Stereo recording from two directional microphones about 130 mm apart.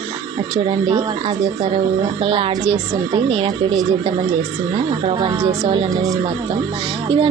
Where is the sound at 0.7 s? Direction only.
45° right (ahead or behind).